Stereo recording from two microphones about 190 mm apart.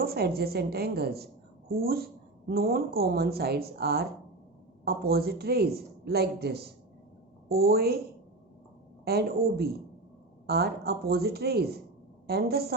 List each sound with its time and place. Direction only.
0.0 s a woman's voice: 55° right (ahead or behind)
9.0 s a woman's voice: 55° right (ahead or behind)